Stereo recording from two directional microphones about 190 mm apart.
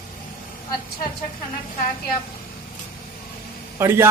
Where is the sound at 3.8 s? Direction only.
15° right (ahead or behind).